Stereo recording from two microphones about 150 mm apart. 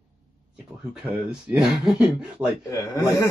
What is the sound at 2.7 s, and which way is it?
Speech, 20° left (ahead or behind).